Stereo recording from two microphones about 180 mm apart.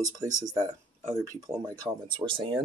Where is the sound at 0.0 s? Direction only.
20° right (ahead or behind).